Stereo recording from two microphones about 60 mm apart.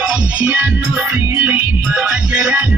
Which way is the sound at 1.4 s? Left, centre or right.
Right.